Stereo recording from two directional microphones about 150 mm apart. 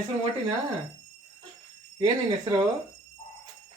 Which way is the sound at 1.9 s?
35° right (ahead or behind).